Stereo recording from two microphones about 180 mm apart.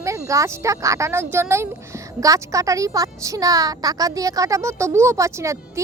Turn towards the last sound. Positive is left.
turn(degrees=-15)  # may be behind; listen again after turning